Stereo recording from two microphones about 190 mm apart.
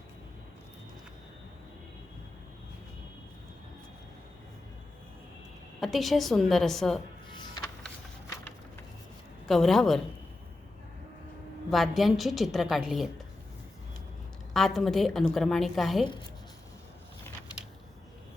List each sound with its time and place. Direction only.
5.8 s a woman's voice: centre (ahead or behind)
7.3 s music: 25° left (ahead or behind)
9.5 s a woman's voice: centre (ahead or behind)
11.7 s a woman's voice: centre (ahead or behind)
14.5 s a woman's voice: centre (ahead or behind)